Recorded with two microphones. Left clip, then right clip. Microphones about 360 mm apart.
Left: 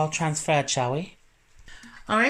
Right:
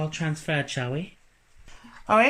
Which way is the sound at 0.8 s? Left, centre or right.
Left.